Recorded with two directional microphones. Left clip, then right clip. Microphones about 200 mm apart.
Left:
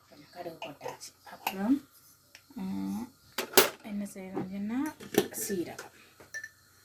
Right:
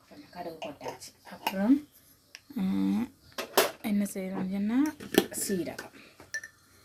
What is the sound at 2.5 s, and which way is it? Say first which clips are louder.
Speech: right 7 dB; 50° right (ahead or behind).